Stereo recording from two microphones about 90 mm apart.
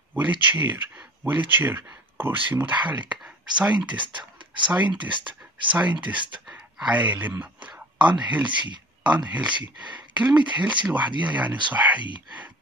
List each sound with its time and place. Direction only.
0.1 s speech: 20° right (ahead or behind)
3.9 s speech: 60° right (ahead or behind)
5.7 s speech: 15° right (ahead or behind)
5.9 s speech: 60° right (ahead or behind)
6.5 s speech: 15° right (ahead or behind)